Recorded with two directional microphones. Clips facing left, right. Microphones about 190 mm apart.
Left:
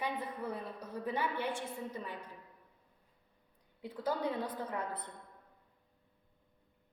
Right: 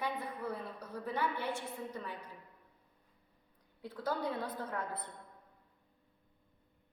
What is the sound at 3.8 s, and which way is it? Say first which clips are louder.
A woman's voice: left 1 dB; 10° left (ahead or behind).